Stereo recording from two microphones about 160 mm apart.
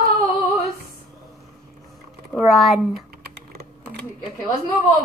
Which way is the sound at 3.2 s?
75° right (ahead or behind).